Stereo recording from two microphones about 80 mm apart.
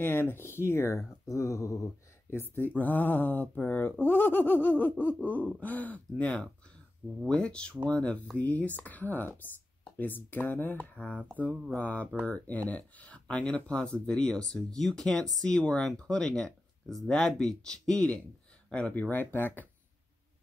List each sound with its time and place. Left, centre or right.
0.0 s speech: left
2.3 s speech: left